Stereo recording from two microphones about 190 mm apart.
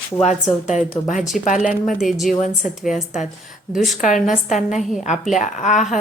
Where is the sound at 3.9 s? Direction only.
40° left (ahead or behind).